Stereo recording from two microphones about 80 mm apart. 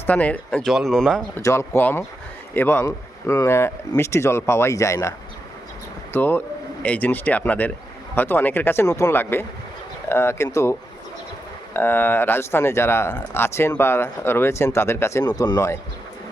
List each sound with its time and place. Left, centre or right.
0.0 s speech: centre
0.6 s speech: centre
1.4 s speech: left
1.8 s speech: left
6.1 s speech: left